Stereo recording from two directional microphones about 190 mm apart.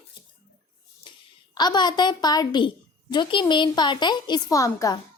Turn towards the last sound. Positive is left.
turn(degrees=15)  # may be behind; listen again after turning